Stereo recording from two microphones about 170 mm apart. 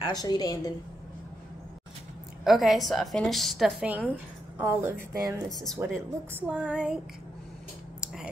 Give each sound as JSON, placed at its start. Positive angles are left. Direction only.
{"t": 0.0, "sound": "a woman's voice", "side_deg": 25}
{"t": 2.4, "sound": "a woman's voice", "side_deg": 0}
{"t": 5.5, "sound": "a woman's voice", "side_deg": 0}